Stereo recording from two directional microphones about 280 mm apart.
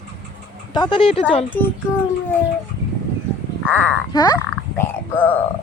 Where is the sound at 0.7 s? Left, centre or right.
Centre.